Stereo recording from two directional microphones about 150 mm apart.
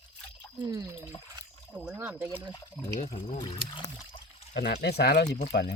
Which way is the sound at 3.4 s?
30° left (ahead or behind).